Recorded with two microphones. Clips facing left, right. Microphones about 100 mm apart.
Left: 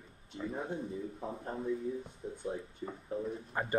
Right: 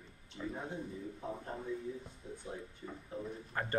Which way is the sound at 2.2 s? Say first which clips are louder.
Left 4 dB; 50° left (ahead or behind).